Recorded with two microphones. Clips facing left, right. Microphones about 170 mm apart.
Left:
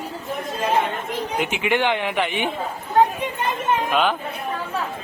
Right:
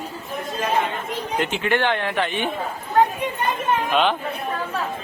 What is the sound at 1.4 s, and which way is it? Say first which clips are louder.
Speech: even; 15° left (ahead or behind).